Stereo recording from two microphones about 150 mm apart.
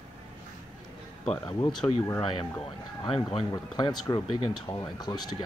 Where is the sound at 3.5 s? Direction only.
25° left (ahead or behind).